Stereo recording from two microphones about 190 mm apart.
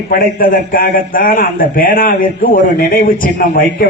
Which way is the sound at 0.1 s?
50° left (ahead or behind).